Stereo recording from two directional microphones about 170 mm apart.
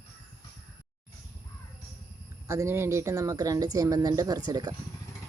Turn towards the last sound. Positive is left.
turn(degrees=-20)  # may be behind; listen again after turning